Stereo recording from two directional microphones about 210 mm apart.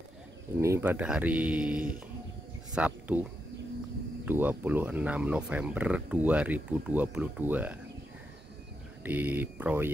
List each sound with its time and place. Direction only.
0.6 s speech: 10° right (ahead or behind)
4.3 s speech: 10° right (ahead or behind)
9.0 s speech: 10° right (ahead or behind)